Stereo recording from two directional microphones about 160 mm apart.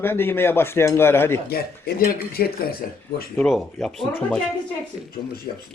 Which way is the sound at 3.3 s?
Centre (ahead or behind).